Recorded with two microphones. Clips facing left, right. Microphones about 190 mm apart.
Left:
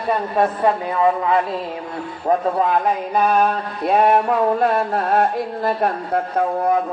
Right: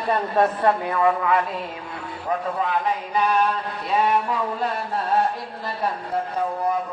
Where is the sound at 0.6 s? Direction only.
25° left (ahead or behind).